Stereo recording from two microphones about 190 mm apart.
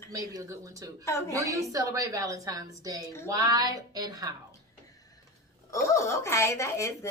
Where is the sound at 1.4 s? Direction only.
15° right (ahead or behind).